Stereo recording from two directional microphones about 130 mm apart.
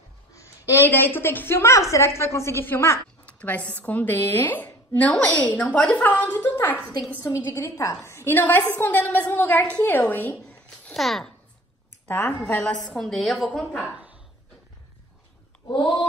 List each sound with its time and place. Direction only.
0.3 s a woman's voice: 25° left (ahead or behind); by 11.3 s centre (ahead or behind)
12.1 s a woman's voice: 15° left (ahead or behind)
13.9 s a sound: 10° right (ahead or behind)
15.7 s speech: 35° left (ahead or behind)